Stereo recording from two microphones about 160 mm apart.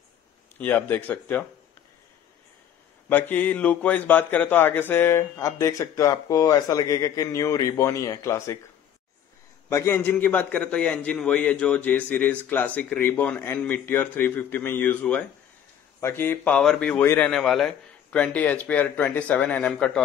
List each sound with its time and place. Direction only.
0.6 s a man's voice: 10° left (ahead or behind)
3.1 s a man's voice: 10° left (ahead or behind)
9.7 s a man's voice: 15° left (ahead or behind)
17.3 s a man's voice: 5° left (ahead or behind)